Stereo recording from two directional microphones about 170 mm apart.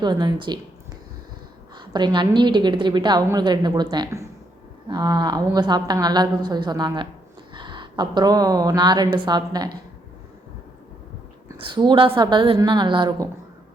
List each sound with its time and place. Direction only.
0.0 s a woman's voice: 25° right (ahead or behind)
1.7 s a woman's voice: 25° right (ahead or behind)
11.5 s a woman's voice: 30° right (ahead or behind)